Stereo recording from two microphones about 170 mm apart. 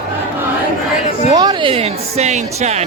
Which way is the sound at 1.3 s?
25° right (ahead or behind).